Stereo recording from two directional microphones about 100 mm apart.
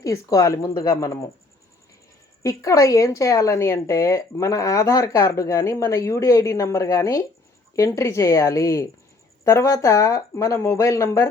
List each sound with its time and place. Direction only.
0.0 s speech: 35° left (ahead or behind)
2.4 s speech: 35° left (ahead or behind)